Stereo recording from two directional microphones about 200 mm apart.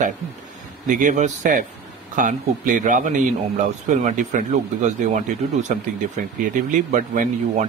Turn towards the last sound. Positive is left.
turn(degrees=-40)  # may be behind; listen again after turning